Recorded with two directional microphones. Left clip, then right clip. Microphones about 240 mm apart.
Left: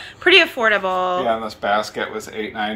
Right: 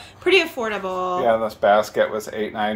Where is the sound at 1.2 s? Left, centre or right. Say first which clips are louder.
Right 3 dB; right.